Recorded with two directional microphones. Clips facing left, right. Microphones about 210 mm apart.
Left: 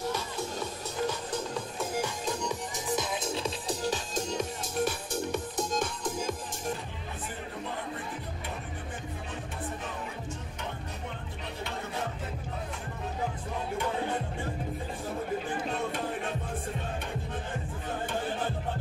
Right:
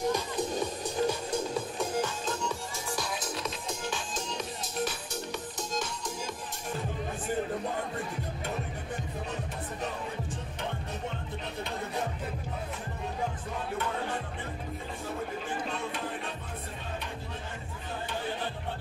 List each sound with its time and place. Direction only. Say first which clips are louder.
0.1 s music: right 4 dB; 15° right (ahead or behind)
1.8 s music: even; 10° left (ahead or behind); by 6.3 s 50° left (ahead or behind)
15.7 s music: left 3 dB; 50° left (ahead or behind)